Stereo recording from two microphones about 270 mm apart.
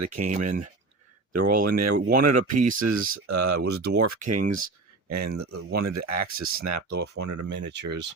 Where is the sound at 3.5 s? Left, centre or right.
Right.